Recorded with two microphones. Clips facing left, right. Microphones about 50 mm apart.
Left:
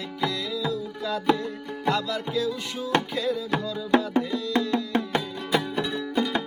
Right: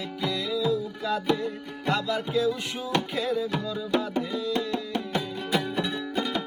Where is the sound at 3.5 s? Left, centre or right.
Left.